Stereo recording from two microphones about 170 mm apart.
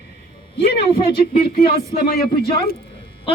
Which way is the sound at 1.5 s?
60° left (ahead or behind).